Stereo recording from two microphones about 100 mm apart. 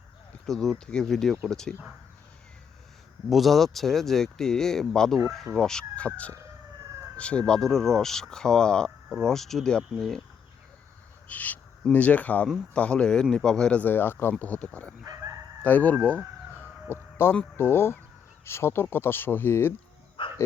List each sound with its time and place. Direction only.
0.4 s speech: 5° left (ahead or behind)
3.2 s speech: centre (ahead or behind)
11.3 s speech: 15° left (ahead or behind)
20.2 s dog: 60° left (ahead or behind)